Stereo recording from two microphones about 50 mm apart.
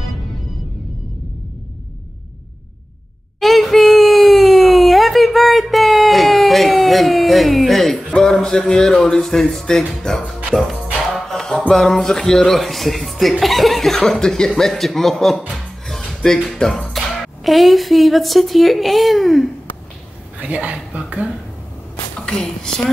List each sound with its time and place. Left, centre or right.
3.3 s a sound: centre
8.2 s speech: centre
10.5 s music: centre
11.7 s speech: centre
16.1 s music: centre
16.4 s speech: centre
20.3 s speech: right
22.2 s a woman's voice: centre